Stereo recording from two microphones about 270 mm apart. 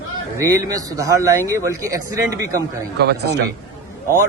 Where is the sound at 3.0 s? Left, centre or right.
Right.